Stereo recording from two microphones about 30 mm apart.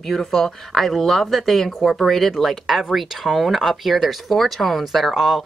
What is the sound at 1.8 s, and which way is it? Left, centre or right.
Speech, centre.